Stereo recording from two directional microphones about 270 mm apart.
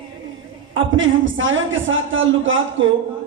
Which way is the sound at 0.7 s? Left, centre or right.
Right.